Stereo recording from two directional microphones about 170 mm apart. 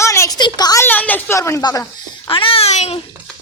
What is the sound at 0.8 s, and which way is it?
A child's voice, 10° left (ahead or behind).